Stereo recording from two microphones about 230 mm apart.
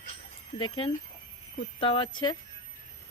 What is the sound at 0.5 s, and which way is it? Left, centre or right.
Speech, centre.